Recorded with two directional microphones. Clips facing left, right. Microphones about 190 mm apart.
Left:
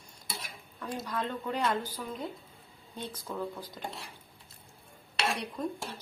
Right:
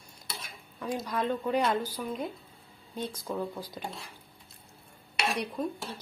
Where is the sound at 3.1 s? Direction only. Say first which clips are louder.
Even; 10° right (ahead or behind).